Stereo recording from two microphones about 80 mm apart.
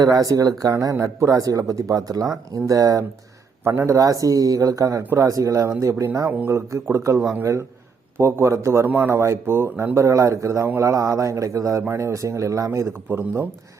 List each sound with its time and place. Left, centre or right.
0.0 s a man's voice: right
3.6 s a man's voice: right
8.9 s speech: right
9.1 s speech: right